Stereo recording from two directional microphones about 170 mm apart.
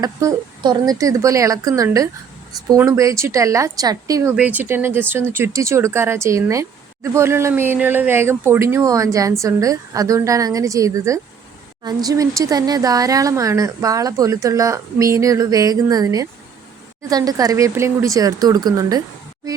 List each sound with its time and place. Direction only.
0.0 s speech: 20° right (ahead or behind)
4.4 s speech: 10° right (ahead or behind)